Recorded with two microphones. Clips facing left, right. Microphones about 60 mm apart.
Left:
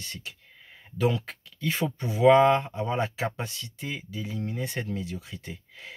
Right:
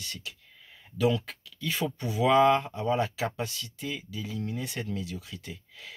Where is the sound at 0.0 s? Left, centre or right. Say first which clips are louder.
Left 1 dB; left.